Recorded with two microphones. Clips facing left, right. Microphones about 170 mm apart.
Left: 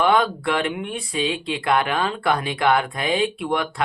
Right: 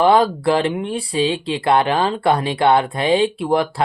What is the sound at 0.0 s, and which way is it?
Speech, 30° right (ahead or behind).